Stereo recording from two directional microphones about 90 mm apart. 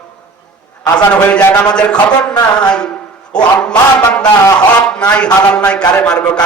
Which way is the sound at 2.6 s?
10° left (ahead or behind).